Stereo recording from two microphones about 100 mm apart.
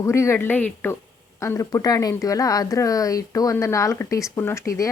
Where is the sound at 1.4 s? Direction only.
30° left (ahead or behind).